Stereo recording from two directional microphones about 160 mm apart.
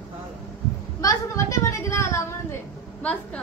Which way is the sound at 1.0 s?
20° left (ahead or behind).